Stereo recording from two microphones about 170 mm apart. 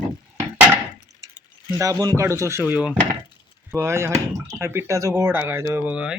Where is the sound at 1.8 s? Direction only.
20° right (ahead or behind).